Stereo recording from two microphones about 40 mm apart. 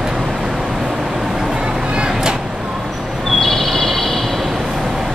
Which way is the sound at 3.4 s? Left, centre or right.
Centre.